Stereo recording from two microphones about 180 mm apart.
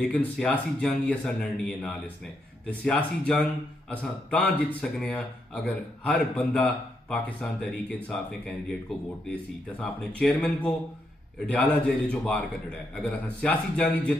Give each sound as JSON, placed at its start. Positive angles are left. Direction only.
{"t": 0.0, "sound": "a man's voice", "side_deg": 5}